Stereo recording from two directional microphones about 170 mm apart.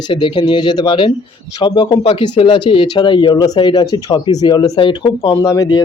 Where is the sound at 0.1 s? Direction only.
30° left (ahead or behind).